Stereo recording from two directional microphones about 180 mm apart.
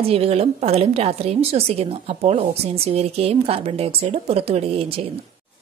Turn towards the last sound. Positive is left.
turn(degrees=-35)  # may be behind; listen again after turning